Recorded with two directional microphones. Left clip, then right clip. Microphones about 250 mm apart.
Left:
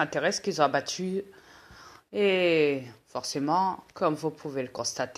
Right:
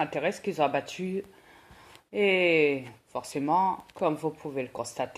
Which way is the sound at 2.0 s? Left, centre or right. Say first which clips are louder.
Even; left.